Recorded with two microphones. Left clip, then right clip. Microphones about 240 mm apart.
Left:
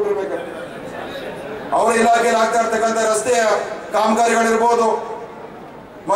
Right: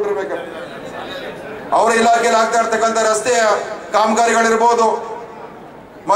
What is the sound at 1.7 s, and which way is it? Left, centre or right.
A man's voice, centre.